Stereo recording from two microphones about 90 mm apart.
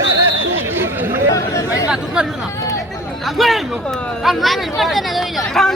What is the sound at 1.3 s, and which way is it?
Chatter, 40° left (ahead or behind).